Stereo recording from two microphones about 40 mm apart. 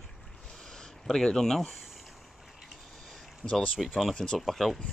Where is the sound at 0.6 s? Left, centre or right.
Centre.